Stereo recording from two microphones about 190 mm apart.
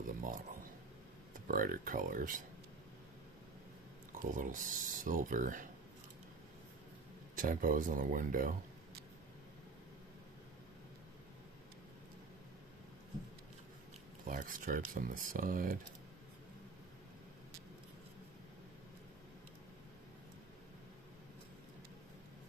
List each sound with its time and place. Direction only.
0.0 s a sound: 45° right (ahead or behind)
1.3 s speech: 45° right (ahead or behind)
4.2 s speech: 45° right (ahead or behind)
7.3 s speech: 45° right (ahead or behind)
14.2 s speech: 45° right (ahead or behind)